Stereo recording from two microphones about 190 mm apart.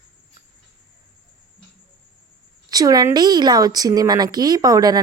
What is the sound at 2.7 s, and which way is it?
Speech, 20° right (ahead or behind).